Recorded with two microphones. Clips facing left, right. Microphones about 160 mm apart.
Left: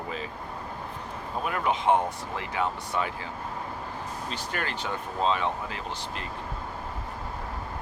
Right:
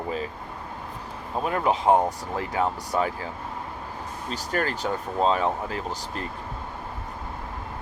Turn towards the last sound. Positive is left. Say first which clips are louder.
# right 4 dB
turn(degrees=-40)  # may be behind; listen again after turning